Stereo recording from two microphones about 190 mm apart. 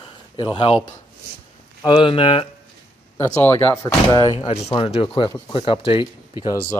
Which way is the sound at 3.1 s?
10° left (ahead or behind).